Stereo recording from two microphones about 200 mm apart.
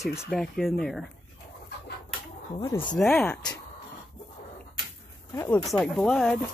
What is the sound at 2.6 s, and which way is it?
Speech, 20° left (ahead or behind).